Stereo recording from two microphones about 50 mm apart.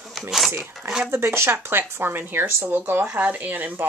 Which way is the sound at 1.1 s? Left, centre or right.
Right.